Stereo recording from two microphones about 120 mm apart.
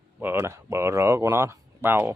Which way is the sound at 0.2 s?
20° right (ahead or behind).